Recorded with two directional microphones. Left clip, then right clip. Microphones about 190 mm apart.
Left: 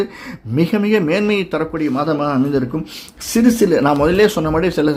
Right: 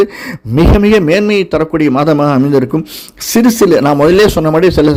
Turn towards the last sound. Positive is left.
turn(degrees=-30)  # may be behind; listen again after turning